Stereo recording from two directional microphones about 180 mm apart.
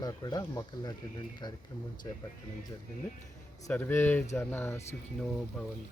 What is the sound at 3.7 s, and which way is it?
Speech, 10° left (ahead or behind).